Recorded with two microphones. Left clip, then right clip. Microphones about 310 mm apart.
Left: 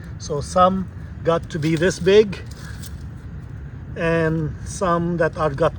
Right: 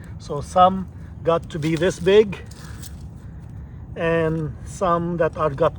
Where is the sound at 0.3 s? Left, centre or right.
Centre.